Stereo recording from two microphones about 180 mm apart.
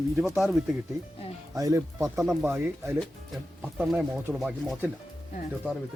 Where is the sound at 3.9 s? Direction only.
Centre (ahead or behind).